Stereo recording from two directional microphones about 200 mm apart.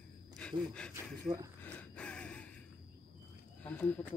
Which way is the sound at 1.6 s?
5° left (ahead or behind).